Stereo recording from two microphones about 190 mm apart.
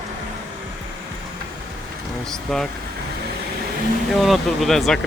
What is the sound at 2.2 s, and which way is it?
Speech, centre (ahead or behind).